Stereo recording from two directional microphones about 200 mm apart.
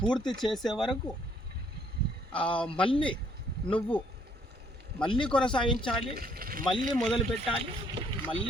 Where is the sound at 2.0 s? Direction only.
55° right (ahead or behind).